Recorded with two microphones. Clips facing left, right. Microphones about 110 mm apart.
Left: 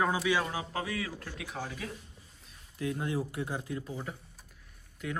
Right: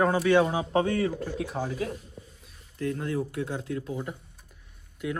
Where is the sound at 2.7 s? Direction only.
10° left (ahead or behind).